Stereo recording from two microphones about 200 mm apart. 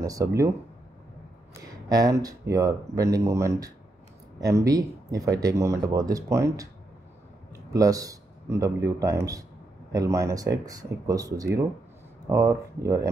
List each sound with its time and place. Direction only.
0.0 s speech: 15° right (ahead or behind)
1.9 s speech: 20° right (ahead or behind)
7.7 s a man's voice: 15° right (ahead or behind)